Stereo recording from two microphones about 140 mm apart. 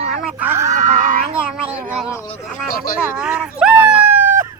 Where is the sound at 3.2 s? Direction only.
5° right (ahead or behind).